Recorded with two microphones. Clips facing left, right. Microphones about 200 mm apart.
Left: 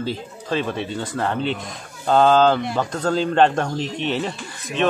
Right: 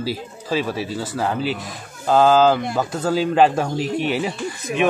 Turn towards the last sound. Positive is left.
turn(degrees=-10)  # may be behind; listen again after turning